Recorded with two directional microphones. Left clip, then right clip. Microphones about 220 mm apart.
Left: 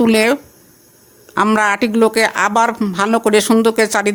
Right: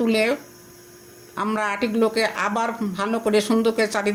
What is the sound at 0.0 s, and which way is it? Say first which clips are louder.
Speech: left 7 dB; 50° left (ahead or behind).